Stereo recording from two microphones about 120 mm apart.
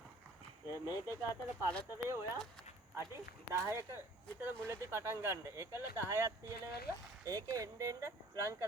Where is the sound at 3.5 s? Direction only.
25° right (ahead or behind).